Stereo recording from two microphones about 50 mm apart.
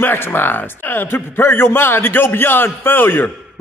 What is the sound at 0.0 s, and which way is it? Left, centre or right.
A man's voice, left.